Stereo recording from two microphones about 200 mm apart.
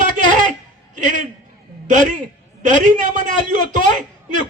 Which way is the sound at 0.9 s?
40° right (ahead or behind).